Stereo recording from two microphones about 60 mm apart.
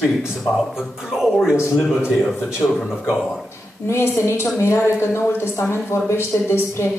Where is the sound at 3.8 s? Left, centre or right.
Left.